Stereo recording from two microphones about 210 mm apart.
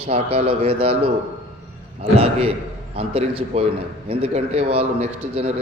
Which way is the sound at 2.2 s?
30° right (ahead or behind).